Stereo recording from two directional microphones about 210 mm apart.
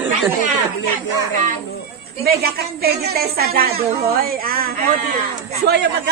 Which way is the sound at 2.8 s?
45° right (ahead or behind).